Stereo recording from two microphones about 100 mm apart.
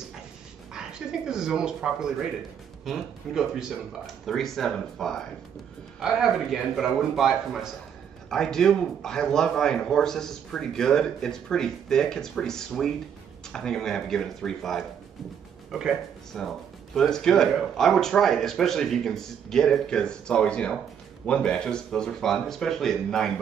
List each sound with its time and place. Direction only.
0.7 s speech: 5° right (ahead or behind)
16.3 s speech: centre (ahead or behind)